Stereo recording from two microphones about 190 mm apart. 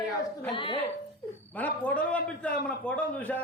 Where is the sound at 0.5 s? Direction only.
25° left (ahead or behind).